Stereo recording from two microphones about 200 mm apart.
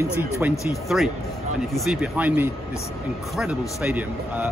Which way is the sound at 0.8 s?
Centre (ahead or behind).